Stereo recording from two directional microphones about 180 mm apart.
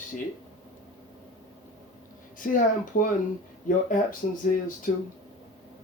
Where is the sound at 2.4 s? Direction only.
50° left (ahead or behind).